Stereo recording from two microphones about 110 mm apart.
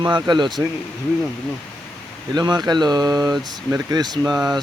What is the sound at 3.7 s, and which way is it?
Speech, 25° right (ahead or behind).